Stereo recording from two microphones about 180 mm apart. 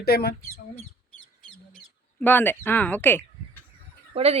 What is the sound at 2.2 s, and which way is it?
Speech, 10° left (ahead or behind).